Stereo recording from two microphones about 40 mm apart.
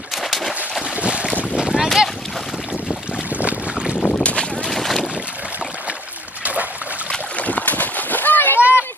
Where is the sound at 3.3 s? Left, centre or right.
Right.